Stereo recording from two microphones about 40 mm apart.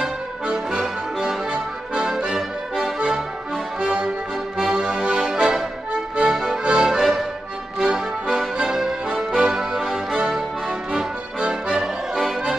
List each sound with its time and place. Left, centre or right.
0.5 s music: centre
2.0 s accordion: right
2.2 s music: centre
4.6 s accordion: centre
4.8 s accordion: right
6.1 s music: centre
6.6 s music: right
6.9 s music: centre; by 11.7 s right